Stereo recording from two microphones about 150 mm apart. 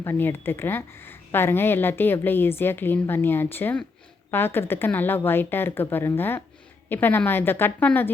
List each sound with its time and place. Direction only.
0.0 s a woman's voice: 15° left (ahead or behind)